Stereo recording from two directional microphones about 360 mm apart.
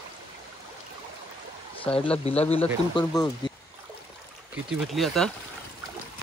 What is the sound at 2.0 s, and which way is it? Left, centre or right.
Speech, centre.